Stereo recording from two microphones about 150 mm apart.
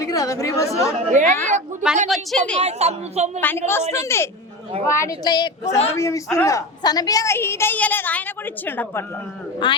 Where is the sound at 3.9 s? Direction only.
15° left (ahead or behind).